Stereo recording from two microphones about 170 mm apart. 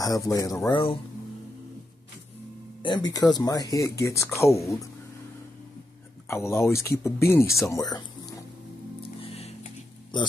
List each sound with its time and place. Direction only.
0.0 s speech: 20° left (ahead or behind)
2.8 s speech: 25° left (ahead or behind)
6.2 s speech: 15° left (ahead or behind)
9.2 s music: 35° left (ahead or behind)
10.1 s speech: 25° left (ahead or behind)